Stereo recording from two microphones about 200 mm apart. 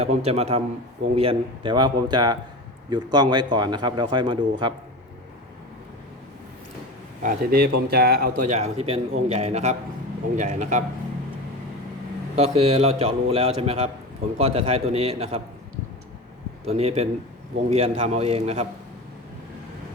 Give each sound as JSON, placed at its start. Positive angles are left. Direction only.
{"t": 0.0, "sound": "a man's voice", "side_deg": -30}
{"t": 7.2, "sound": "a man's voice", "side_deg": -45}
{"t": 12.4, "sound": "a man's voice", "side_deg": -30}
{"t": 16.6, "sound": "a man's voice", "side_deg": -30}